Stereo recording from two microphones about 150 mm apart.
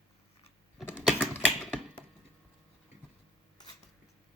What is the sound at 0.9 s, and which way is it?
Typing, 10° right (ahead or behind).